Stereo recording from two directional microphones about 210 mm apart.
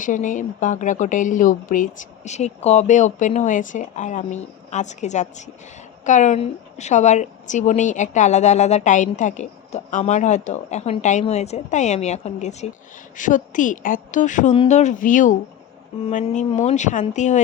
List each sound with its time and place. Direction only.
0.0 s a woman's voice: 40° left (ahead or behind)